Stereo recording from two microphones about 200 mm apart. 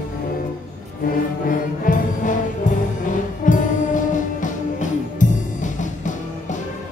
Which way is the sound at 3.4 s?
40° left (ahead or behind).